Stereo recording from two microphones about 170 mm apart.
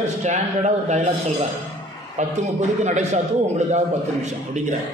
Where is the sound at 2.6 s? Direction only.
45° right (ahead or behind).